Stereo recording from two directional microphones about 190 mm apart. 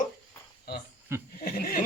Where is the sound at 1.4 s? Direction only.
50° left (ahead or behind).